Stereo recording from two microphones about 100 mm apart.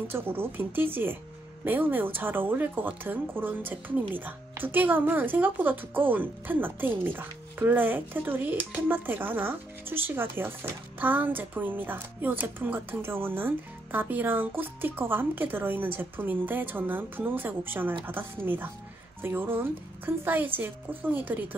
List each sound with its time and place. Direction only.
0.1 s speech: 20° right (ahead or behind)